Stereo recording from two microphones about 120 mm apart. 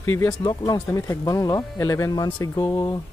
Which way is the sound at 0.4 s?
40° left (ahead or behind).